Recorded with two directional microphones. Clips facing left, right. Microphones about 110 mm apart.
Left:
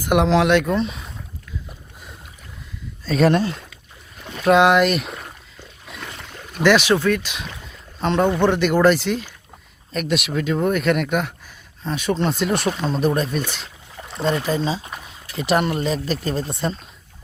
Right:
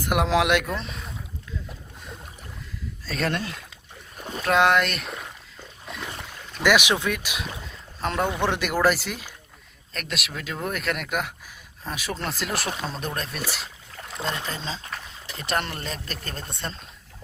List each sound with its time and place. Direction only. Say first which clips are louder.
0.0 s speech: left 5 dB; centre (ahead or behind)
3.1 s speech: left 11 dB; 5° right (ahead or behind)
4.2 s boat: right 1 dB; 35° right (ahead or behind)
4.4 s speech: left 6 dB; centre (ahead or behind)
5.8 s boat: right 1 dB; centre (ahead or behind)
6.6 s speech: left 5 dB; 10° right (ahead or behind)